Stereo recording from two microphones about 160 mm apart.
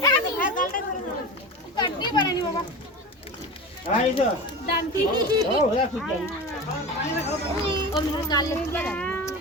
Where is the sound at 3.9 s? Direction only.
50° left (ahead or behind).